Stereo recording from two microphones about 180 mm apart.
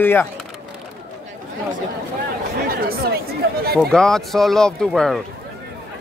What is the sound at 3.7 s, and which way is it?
Speech, 5° left (ahead or behind).